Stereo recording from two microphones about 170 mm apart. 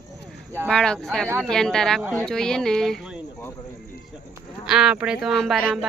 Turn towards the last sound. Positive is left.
turn(degrees=0)  # may be behind; listen again after turning